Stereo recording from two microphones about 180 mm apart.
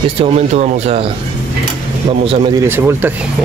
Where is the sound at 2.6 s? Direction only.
10° right (ahead or behind).